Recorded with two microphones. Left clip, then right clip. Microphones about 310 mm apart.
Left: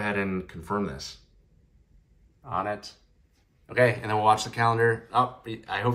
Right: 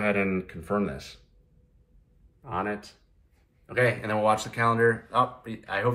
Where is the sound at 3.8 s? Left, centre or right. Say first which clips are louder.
Left 1 dB; left.